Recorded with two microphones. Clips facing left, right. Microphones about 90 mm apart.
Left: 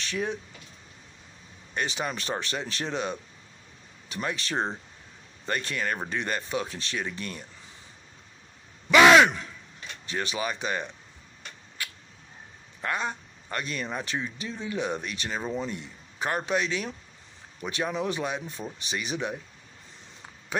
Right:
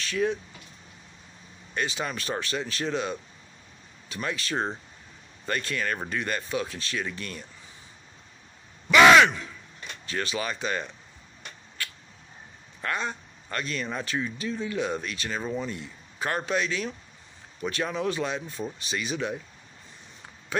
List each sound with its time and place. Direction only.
0.0 s speech: 25° left (ahead or behind)
1.7 s speech: 25° left (ahead or behind)
10.0 s speech: 20° left (ahead or behind)
11.8 s a sound: 15° left (ahead or behind)
12.8 s speech: 20° left (ahead or behind)